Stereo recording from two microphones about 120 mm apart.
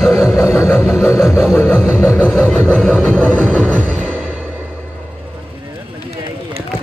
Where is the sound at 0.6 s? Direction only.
20° left (ahead or behind).